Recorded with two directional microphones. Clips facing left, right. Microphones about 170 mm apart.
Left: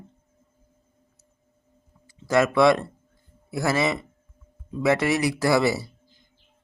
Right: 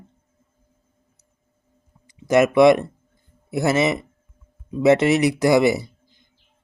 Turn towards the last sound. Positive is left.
turn(degrees=-20)  # may be behind; listen again after turning